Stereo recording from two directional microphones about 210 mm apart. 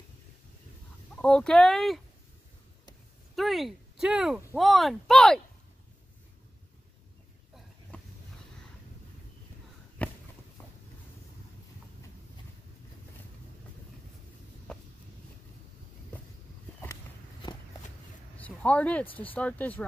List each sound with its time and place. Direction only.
1.1 s speech: 5° left (ahead or behind)
3.3 s speech: centre (ahead or behind)
10.0 s walk: 5° left (ahead or behind)
14.7 s a sound: 5° left (ahead or behind)
16.8 s walk: 15° left (ahead or behind)
18.4 s a sound: 5° left (ahead or behind)
19.1 s speech: 10° left (ahead or behind)